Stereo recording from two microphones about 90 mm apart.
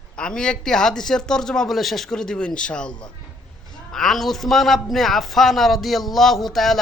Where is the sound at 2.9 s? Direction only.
55° left (ahead or behind).